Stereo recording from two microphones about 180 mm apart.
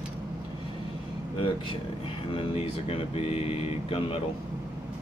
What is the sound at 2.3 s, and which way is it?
Speech, 30° left (ahead or behind).